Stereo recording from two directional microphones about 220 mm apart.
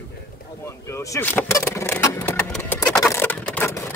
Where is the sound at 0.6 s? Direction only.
15° left (ahead or behind).